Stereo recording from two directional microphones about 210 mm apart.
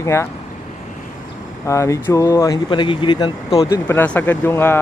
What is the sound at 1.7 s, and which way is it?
Speech, 15° left (ahead or behind).